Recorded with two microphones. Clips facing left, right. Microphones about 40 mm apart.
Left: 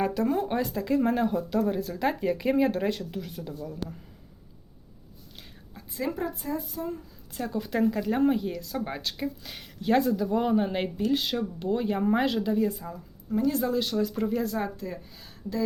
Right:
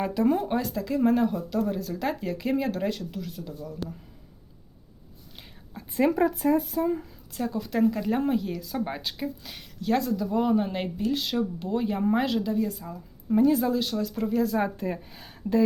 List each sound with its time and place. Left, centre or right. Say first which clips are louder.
0.0 s speech: right 2 dB; centre
0.4 s speech: even; centre
6.1 s speech: right 9 dB; right
6.5 s speech: right 8 dB; right
7.3 s speech: right 1 dB; centre
9.8 s speech: left 2 dB; centre
13.5 s speech: right 2 dB; centre
14.8 s speech: right 5 dB; right